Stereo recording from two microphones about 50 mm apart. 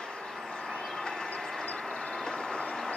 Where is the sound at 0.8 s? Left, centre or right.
Centre.